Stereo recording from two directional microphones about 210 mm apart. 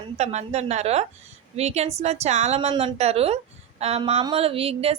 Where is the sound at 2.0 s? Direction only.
30° right (ahead or behind).